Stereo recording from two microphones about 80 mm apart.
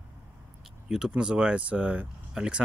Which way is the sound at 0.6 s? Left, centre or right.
Centre.